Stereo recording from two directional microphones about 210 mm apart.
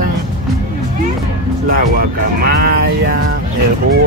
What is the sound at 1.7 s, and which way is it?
Speech, 45° right (ahead or behind).